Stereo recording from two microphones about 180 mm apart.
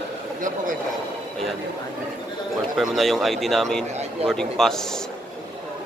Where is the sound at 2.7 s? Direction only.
Centre (ahead or behind).